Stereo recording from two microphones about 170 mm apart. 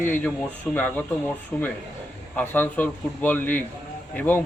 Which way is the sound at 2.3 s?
10° left (ahead or behind).